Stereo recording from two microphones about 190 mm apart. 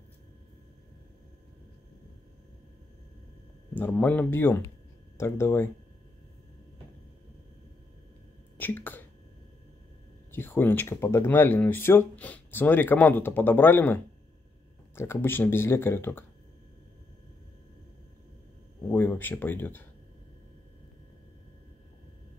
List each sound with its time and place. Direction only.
3.7 s speech: 10° left (ahead or behind)
8.5 s a sound: 10° left (ahead or behind)
10.3 s speech: 10° left (ahead or behind)
18.9 s speech: 10° left (ahead or behind)